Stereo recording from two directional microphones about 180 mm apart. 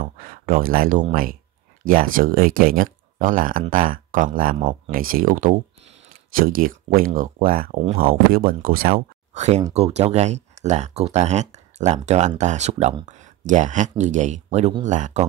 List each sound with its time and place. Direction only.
0.0 s speech: 50° right (ahead or behind)
9.3 s speech: 40° right (ahead or behind)